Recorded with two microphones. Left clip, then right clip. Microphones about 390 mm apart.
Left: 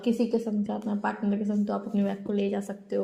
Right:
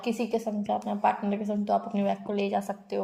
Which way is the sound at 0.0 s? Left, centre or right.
Right.